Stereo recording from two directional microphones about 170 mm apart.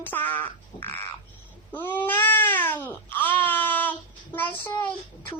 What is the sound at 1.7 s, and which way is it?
Cat, 10° left (ahead or behind).